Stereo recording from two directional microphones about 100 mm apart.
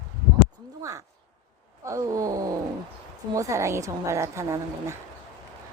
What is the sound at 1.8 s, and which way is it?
A woman's voice, 35° right (ahead or behind).